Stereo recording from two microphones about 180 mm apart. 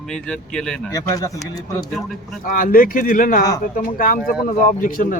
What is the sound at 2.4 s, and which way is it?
Speech, 50° left (ahead or behind).